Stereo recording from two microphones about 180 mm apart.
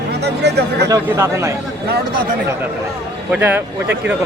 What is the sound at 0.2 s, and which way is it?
Speech, 65° right (ahead or behind).